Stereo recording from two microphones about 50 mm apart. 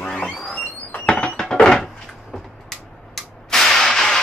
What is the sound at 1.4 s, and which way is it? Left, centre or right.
Wood, centre.